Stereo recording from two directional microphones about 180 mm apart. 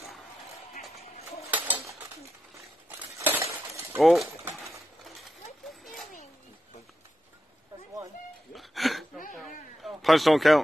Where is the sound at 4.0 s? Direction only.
Centre (ahead or behind).